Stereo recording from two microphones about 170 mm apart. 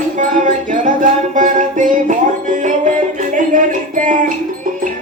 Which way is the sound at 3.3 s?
50° right (ahead or behind).